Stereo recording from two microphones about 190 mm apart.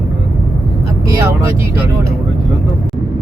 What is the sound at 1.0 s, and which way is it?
Speech, 15° right (ahead or behind).